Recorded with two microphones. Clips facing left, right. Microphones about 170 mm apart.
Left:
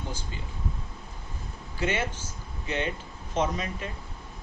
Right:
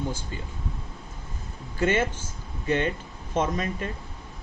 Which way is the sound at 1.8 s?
50° right (ahead or behind).